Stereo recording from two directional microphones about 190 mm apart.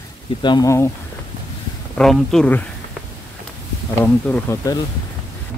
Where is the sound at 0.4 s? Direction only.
20° left (ahead or behind).